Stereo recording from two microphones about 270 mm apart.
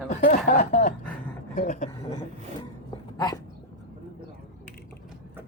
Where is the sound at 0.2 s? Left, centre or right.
Left.